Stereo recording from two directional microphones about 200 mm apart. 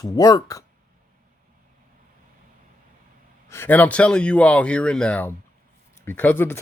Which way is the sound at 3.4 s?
10° left (ahead or behind).